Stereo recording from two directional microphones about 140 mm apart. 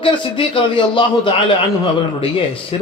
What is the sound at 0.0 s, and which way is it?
A man's voice, 40° left (ahead or behind).